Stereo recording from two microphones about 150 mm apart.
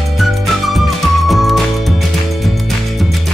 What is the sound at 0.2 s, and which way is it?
Music, centre (ahead or behind).